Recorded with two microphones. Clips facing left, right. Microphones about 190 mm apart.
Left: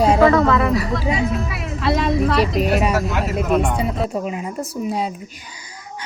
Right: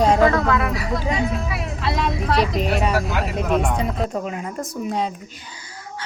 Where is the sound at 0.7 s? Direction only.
Centre (ahead or behind).